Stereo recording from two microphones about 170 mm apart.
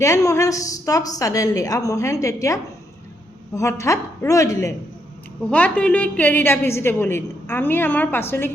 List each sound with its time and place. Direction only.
0.0 s a woman's voice: 20° left (ahead or behind)